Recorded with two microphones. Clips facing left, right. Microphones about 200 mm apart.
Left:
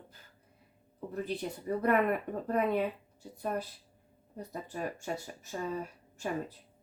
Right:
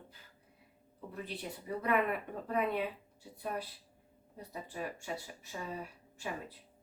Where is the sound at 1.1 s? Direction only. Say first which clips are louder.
Left 7 dB; 45° left (ahead or behind).